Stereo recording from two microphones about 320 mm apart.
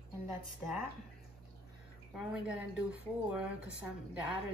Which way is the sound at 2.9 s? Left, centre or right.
Centre.